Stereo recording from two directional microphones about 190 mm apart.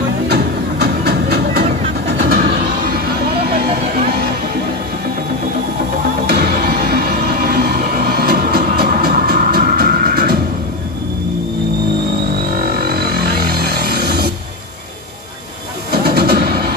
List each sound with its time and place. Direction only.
1.0 s a sound: 60° right (ahead or behind)
6.2 s music: 55° right (ahead or behind)
12.5 s music: 55° right (ahead or behind)
15.9 s music: 55° right (ahead or behind)